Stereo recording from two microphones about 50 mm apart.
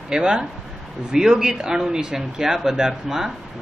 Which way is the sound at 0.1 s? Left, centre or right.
Centre.